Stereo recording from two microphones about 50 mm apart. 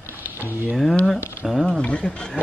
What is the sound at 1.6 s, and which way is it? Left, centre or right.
Speech, centre.